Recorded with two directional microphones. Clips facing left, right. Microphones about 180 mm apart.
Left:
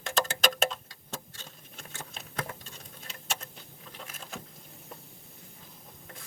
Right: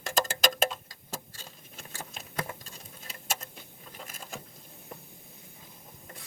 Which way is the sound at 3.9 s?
5° right (ahead or behind).